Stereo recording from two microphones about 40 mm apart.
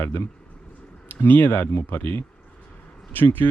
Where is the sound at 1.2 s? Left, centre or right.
Left.